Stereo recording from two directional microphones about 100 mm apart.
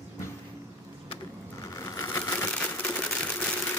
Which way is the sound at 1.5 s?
35° left (ahead or behind).